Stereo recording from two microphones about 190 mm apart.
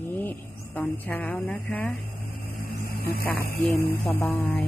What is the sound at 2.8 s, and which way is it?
Speech, 55° left (ahead or behind).